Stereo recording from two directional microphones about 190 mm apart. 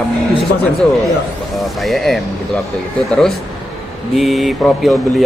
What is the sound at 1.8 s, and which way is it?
Speech, centre (ahead or behind).